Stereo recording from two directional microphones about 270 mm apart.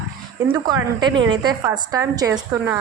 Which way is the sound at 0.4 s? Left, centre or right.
Centre.